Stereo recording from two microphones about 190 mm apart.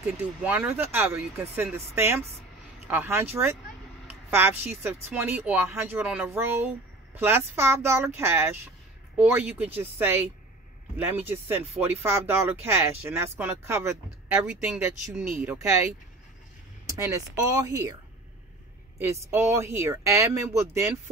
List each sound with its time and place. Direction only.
0.0 s speech: 10° right (ahead or behind)
18.9 s speech: 15° right (ahead or behind)